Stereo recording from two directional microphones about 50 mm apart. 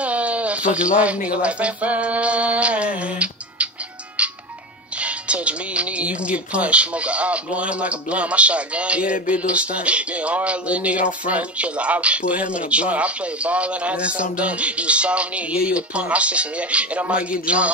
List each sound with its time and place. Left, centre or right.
0.0 s speech: right
4.2 s music: right
4.9 s speech: right